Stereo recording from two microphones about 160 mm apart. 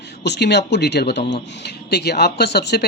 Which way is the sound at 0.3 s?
90° left.